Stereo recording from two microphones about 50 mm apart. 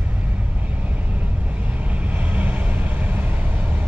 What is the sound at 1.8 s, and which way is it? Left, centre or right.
Vehicle, right.